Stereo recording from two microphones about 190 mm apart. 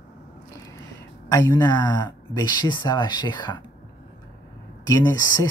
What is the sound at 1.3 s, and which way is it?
Speech, 20° left (ahead or behind).